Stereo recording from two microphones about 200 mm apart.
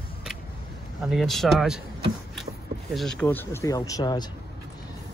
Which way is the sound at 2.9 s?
Centre (ahead or behind).